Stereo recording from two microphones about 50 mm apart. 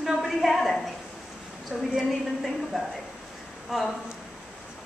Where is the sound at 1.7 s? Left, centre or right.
Centre.